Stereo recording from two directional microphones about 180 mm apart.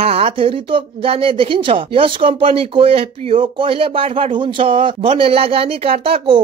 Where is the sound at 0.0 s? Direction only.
30° right (ahead or behind).